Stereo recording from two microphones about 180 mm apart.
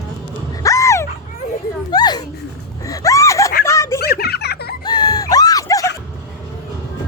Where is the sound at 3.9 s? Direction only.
60° left (ahead or behind).